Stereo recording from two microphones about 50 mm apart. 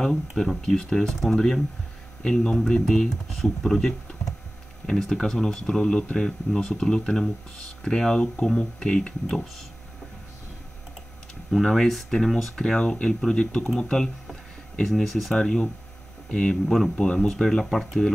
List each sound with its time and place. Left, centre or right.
0.4 s speech: centre
11.6 s speech: centre
15.3 s speech: centre
17.3 s speech: centre